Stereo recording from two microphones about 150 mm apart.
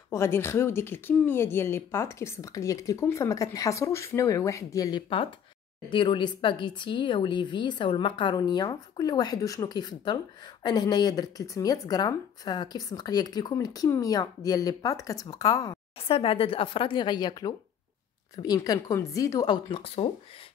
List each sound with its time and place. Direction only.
0.1 s speech: 15° left (ahead or behind)
16.0 s speech: 40° left (ahead or behind)